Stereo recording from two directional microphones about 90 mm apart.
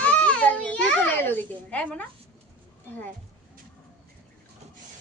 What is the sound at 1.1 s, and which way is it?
Speech, 20° left (ahead or behind).